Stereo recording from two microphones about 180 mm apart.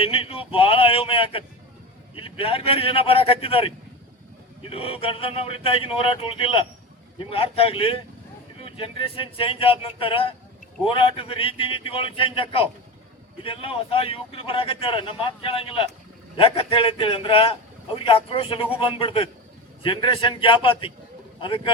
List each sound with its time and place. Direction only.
0.0 s a man's voice: 30° left (ahead or behind)